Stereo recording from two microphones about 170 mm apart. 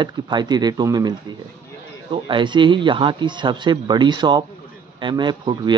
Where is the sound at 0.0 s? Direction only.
25° right (ahead or behind).